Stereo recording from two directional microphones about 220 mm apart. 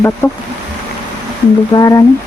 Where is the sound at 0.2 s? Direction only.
10° left (ahead or behind).